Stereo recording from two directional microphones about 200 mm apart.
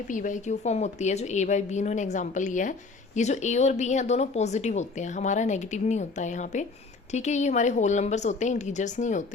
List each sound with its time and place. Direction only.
0.1 s speech: 40° left (ahead or behind)